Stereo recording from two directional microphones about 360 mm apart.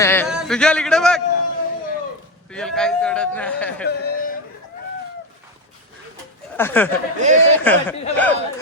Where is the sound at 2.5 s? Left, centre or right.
Centre.